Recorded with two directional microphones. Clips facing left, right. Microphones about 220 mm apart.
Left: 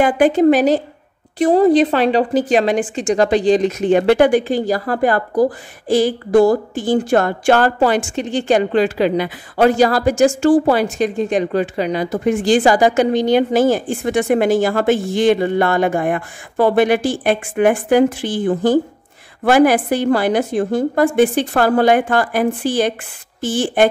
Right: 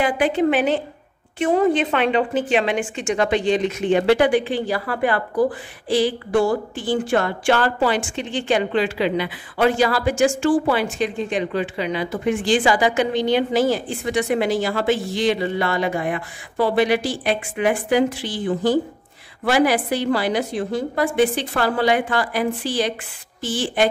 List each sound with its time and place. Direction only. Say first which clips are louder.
0.0 s a woman's voice: left 6 dB; 45° left (ahead or behind)